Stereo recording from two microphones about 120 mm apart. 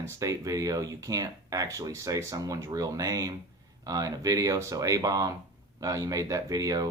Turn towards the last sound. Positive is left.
turn(degrees=-30)  # may be behind; listen again after turning